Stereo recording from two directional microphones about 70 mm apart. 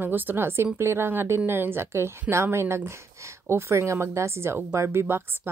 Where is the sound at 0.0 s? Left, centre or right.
Right.